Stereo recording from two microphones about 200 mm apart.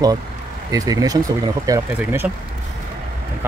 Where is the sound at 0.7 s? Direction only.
15° right (ahead or behind).